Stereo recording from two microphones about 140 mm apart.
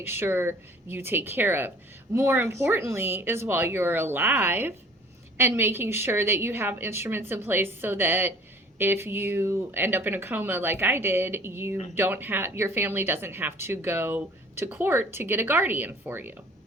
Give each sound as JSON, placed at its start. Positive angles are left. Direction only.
{"t": 0.0, "sound": "speech", "side_deg": -15}